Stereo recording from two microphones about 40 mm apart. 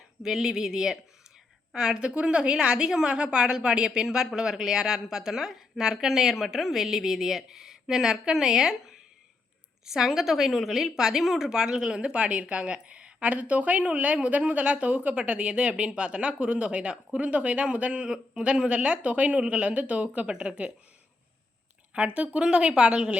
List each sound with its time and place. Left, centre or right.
0.2 s a woman's voice: centre
2.0 s a woman's voice: right
11.9 s a woman's voice: right
13.3 s a woman's voice: right
18.1 s a woman's voice: right
21.9 s a woman's voice: right